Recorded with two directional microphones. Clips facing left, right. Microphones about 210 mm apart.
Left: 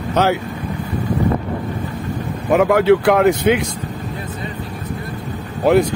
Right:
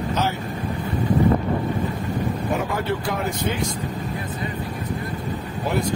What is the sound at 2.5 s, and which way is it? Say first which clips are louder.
Speech: left 16 dB; 85° left.